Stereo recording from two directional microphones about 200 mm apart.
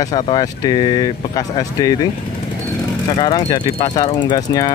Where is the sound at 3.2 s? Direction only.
25° left (ahead or behind).